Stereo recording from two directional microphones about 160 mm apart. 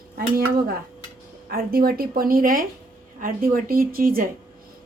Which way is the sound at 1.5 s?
70° right (ahead or behind).